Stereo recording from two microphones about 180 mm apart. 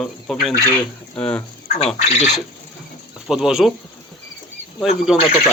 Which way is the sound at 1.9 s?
40° left (ahead or behind).